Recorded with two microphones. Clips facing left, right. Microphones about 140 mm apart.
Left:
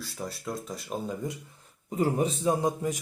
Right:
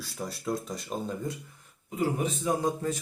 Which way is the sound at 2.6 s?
15° left (ahead or behind).